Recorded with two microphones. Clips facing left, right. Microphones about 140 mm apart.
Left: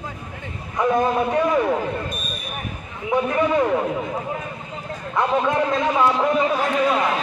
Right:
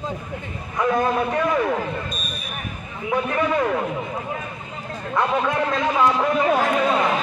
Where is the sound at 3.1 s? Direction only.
15° left (ahead or behind).